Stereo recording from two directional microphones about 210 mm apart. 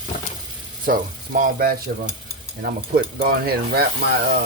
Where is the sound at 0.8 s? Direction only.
40° right (ahead or behind).